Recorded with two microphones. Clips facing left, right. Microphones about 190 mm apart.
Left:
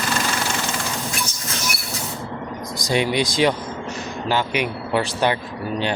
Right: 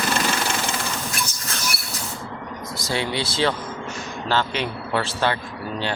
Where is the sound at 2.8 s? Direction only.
15° left (ahead or behind).